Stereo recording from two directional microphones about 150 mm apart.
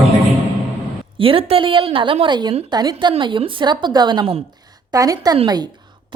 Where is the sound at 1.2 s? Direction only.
35° right (ahead or behind).